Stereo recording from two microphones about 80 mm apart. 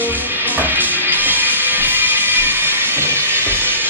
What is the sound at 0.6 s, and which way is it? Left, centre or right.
Music, right.